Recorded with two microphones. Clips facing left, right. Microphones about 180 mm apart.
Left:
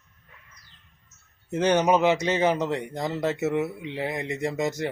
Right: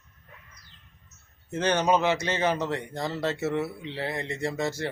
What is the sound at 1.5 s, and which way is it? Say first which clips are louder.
Speech: left 3 dB; 20° left (ahead or behind).